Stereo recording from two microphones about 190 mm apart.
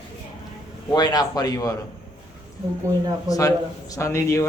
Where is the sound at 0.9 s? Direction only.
20° left (ahead or behind).